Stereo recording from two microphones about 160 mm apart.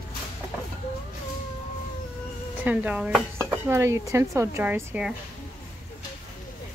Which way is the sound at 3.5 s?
15° right (ahead or behind).